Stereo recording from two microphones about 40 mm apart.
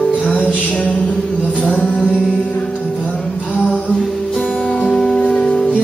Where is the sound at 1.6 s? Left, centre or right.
Left.